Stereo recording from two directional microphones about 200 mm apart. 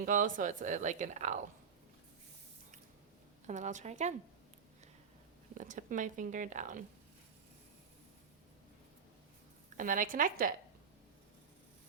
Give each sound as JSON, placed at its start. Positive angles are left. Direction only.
{"t": 0.0, "sound": "speech", "side_deg": -40}
{"t": 3.4, "sound": "speech", "side_deg": -35}
{"t": 5.5, "sound": "speech", "side_deg": -40}
{"t": 9.7, "sound": "a woman's voice", "side_deg": -40}